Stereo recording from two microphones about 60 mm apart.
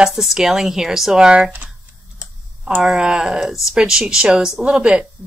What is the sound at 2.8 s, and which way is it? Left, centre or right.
Speech, centre.